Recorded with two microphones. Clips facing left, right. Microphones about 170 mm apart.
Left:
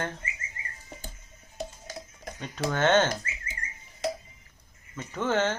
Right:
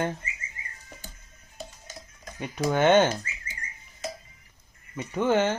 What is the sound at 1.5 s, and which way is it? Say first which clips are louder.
Stir: left 5 dB; 60° left (ahead or behind).